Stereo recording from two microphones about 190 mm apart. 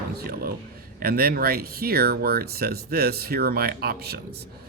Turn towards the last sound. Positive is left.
turn(degrees=-55)  # may be behind; listen again after turning